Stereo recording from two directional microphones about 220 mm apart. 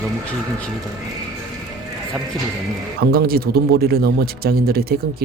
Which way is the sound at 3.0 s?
45° right (ahead or behind).